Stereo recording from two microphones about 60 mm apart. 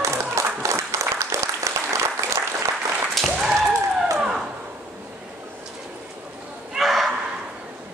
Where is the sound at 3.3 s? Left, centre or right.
Centre.